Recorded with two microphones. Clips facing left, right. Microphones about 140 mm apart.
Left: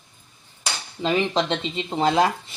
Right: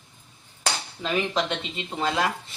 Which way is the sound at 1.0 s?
25° left (ahead or behind).